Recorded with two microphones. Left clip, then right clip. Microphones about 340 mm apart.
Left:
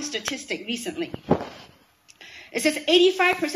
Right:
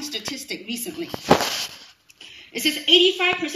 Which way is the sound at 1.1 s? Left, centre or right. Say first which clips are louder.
Right 9 dB; right.